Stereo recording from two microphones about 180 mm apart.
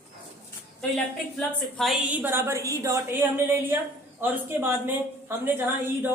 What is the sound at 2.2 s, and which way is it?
A woman's voice, 15° right (ahead or behind).